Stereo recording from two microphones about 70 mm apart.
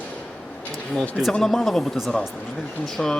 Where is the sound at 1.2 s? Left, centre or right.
Centre.